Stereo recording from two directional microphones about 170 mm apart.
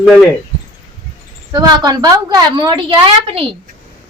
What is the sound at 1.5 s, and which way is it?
A woman's voice, 25° right (ahead or behind).